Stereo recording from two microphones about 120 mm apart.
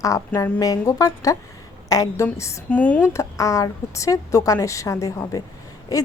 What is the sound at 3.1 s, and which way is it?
A woman's voice, 25° left (ahead or behind).